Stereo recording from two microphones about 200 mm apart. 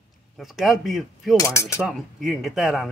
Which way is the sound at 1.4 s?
15° left (ahead or behind).